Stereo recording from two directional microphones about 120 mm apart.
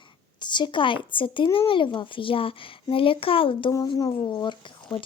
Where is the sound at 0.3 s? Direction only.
40° left (ahead or behind).